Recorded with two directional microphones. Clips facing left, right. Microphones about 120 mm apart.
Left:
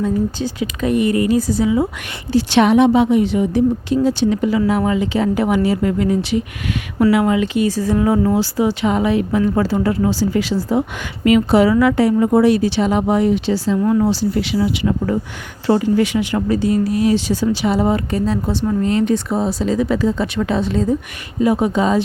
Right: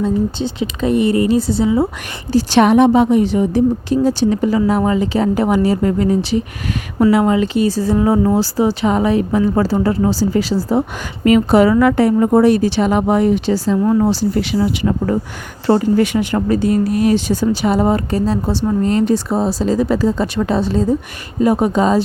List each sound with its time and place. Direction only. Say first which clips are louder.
0.0 s speech: right 2 dB; 25° right (ahead or behind); by 13.7 s 45° right (ahead or behind)
13.8 s speech: right 1 dB; 30° right (ahead or behind)
14.1 s speech: right 1 dB; 45° right (ahead or behind)